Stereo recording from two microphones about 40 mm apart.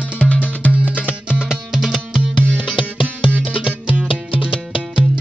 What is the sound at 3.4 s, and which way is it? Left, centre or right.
Music, right.